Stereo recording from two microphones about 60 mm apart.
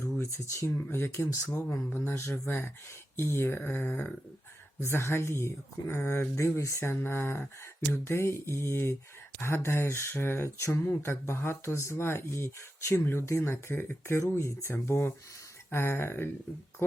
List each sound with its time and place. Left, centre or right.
0.0 s speech: left
0.9 s speech: left
4.8 s speech: left
7.0 s speech: left